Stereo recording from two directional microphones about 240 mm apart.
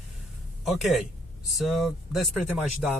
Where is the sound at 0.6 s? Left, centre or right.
Centre.